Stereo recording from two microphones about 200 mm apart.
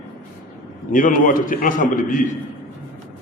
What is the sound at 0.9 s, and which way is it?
A man's voice, 45° left (ahead or behind).